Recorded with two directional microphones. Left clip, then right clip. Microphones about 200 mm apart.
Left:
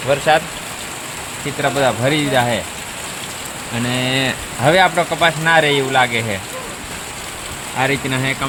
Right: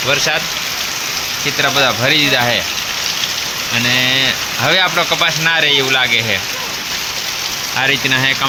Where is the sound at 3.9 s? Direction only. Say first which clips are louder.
Right 5 dB; 25° left (ahead or behind).